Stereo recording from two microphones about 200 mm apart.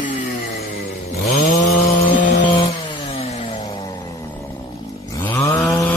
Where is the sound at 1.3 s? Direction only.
35° left (ahead or behind).